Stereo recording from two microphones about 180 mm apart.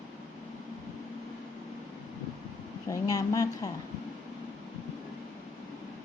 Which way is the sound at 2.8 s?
20° left (ahead or behind).